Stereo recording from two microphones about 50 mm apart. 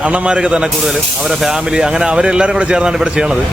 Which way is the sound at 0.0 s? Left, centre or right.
Right.